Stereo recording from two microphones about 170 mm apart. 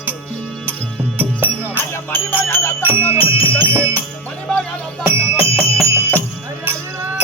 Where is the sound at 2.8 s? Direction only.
15° right (ahead or behind).